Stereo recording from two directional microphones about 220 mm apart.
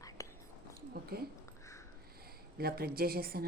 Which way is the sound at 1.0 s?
45° right (ahead or behind).